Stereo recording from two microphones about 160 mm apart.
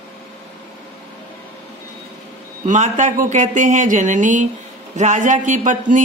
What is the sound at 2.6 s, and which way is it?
A woman's voice, 50° right (ahead or behind).